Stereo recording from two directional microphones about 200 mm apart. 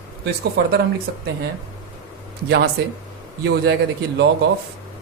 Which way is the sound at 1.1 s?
55° right (ahead or behind).